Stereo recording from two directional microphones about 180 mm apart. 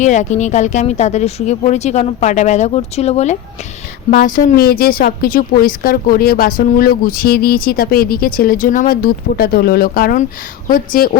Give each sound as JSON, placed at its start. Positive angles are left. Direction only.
{"t": 0.0, "sound": "speech", "side_deg": 40}
{"t": 4.1, "sound": "a woman's voice", "side_deg": 50}